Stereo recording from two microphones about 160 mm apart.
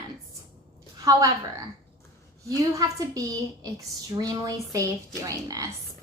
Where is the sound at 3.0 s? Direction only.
20° right (ahead or behind).